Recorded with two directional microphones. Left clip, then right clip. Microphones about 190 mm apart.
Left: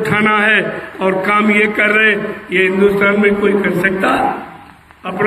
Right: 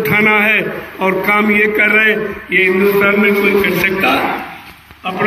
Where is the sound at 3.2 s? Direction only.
50° left (ahead or behind).